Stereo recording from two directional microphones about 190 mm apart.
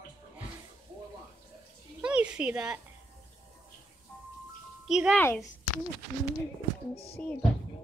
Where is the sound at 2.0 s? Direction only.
5° right (ahead or behind).